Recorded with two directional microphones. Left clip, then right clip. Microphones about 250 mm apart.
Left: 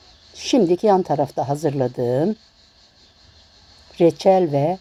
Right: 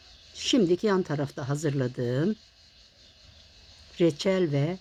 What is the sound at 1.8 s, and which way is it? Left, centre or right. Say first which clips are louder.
Speech: left 9 dB; left.